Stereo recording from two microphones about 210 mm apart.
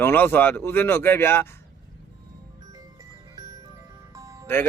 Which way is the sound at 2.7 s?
15° right (ahead or behind).